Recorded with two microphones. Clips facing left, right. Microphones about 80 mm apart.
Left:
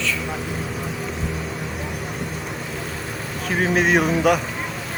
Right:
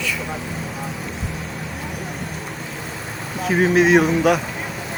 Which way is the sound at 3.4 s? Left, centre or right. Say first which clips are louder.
Right 4 dB; centre.